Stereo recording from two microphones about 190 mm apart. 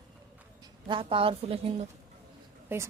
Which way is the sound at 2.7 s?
10° right (ahead or behind).